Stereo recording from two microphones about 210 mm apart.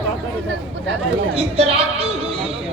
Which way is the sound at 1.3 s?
30° right (ahead or behind).